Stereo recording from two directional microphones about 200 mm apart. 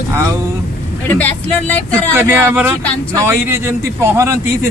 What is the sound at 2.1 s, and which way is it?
A man's voice, 10° right (ahead or behind).